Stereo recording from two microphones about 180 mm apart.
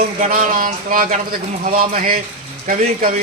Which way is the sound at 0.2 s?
50° right (ahead or behind).